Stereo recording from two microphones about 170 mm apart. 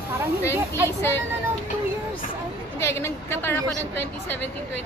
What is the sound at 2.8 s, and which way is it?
Speech, 15° left (ahead or behind).